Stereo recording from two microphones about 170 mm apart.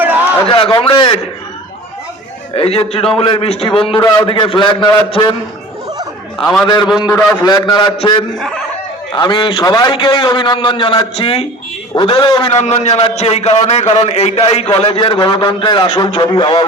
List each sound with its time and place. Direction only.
0.4 s a man's voice: 30° left (ahead or behind)
2.6 s a man's voice: 35° left (ahead or behind)
6.4 s a man's voice: 5° left (ahead or behind)
7.0 s a man's voice: 20° left (ahead or behind)
7.5 s a man's voice: 30° left (ahead or behind)
8.4 s a man's voice: 5° left (ahead or behind)
9.1 s a man's voice: 25° left (ahead or behind)
12.5 s a man's voice: 40° left (ahead or behind)